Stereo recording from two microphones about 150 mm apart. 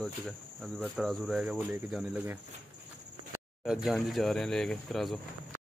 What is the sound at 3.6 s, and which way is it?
Speech, 5° right (ahead or behind).